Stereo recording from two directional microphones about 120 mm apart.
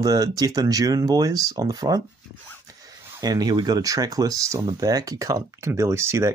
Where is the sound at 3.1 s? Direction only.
35° right (ahead or behind).